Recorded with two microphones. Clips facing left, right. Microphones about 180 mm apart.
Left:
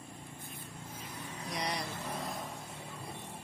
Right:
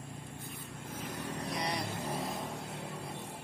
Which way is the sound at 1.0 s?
75° right (ahead or behind).